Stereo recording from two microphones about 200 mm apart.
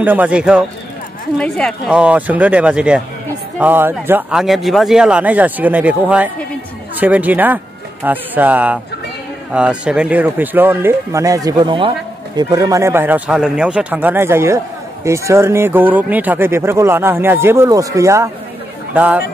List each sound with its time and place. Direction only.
0.0 s speech: 10° right (ahead or behind)